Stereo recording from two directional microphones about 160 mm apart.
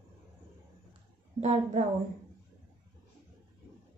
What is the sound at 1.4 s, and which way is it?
Speech, 45° right (ahead or behind).